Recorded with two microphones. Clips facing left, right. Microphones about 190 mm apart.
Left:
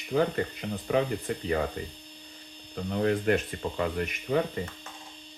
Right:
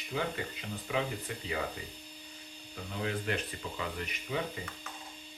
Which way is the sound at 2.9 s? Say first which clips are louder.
Left 10 dB; 45° left (ahead or behind).